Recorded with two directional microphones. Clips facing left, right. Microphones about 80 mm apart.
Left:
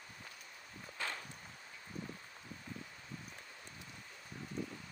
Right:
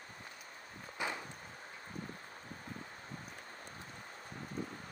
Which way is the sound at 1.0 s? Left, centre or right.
Centre.